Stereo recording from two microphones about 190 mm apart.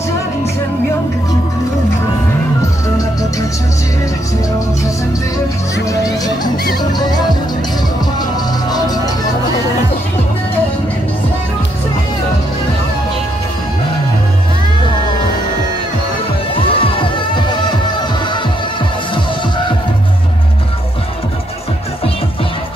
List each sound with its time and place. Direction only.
3.0 s music: 20° left (ahead or behind)
5.9 s speech: 20° left (ahead or behind)
6.5 s speech: 50° left (ahead or behind)
6.8 s music: 20° left (ahead or behind)
8.2 s music: 20° left (ahead or behind)
16.6 s music: 30° left (ahead or behind)